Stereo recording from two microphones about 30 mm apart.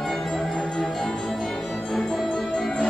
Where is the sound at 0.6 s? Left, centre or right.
Left.